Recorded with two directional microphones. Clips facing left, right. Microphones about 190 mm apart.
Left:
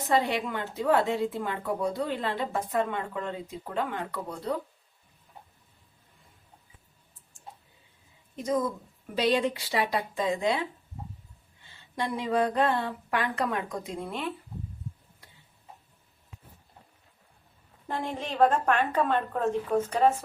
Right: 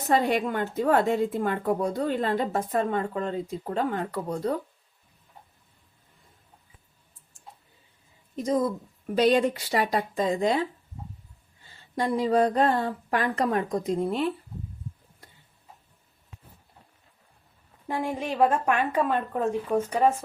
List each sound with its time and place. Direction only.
0.1 s a woman's voice: 45° right (ahead or behind)
9.1 s a woman's voice: 45° right (ahead or behind)
11.7 s a woman's voice: 40° right (ahead or behind)
17.8 s a woman's voice: 10° right (ahead or behind)